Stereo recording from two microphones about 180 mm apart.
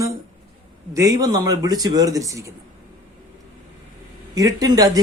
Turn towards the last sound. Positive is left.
turn(degrees=-20)  # may be behind; listen again after turning